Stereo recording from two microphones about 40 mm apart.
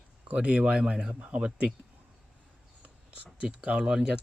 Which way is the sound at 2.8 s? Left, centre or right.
Right.